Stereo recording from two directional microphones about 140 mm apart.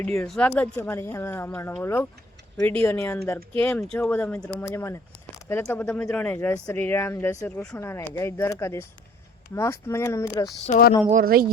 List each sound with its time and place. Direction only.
0.3 s speech: 10° left (ahead or behind)
3.8 s speech: 5° left (ahead or behind)
10.7 s speech: 90° left
11.1 s speech: 90° right